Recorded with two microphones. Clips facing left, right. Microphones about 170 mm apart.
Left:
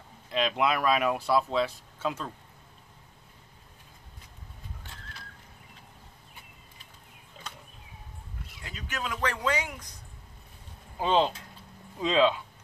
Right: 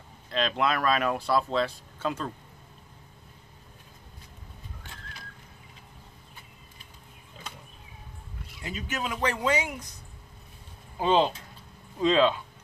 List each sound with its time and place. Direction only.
0.3 s speech: 10° left (ahead or behind)
8.6 s a man's voice: 20° right (ahead or behind)
11.0 s speech: 5° right (ahead or behind)